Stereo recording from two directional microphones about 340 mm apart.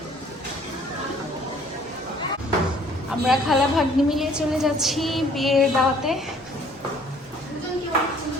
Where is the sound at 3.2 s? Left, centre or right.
Centre.